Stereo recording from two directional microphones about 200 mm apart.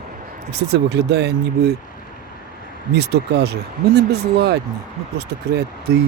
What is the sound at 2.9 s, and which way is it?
Speech, 55° right (ahead or behind).